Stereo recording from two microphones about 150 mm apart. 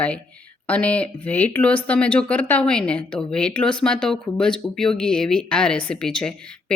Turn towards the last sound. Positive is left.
turn(degrees=5)  # may be behind; listen again after turning